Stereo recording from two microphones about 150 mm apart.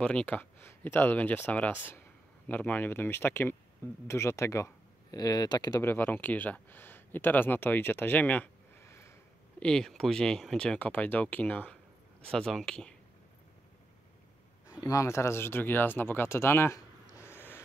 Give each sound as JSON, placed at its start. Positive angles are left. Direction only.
{"t": 0.0, "sound": "speech", "side_deg": 10}
{"t": 5.8, "sound": "speech", "side_deg": 15}
{"t": 9.6, "sound": "speech", "side_deg": 5}
{"t": 14.8, "sound": "speech", "side_deg": 20}